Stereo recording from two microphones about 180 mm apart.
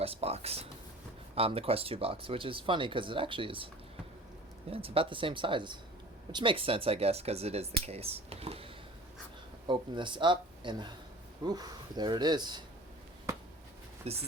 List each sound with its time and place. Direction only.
0.0 s speech: 35° right (ahead or behind)
4.7 s speech: 30° right (ahead or behind)
14.0 s speech: 35° right (ahead or behind)